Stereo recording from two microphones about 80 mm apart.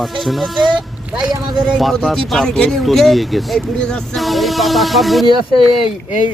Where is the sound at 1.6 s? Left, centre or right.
Centre.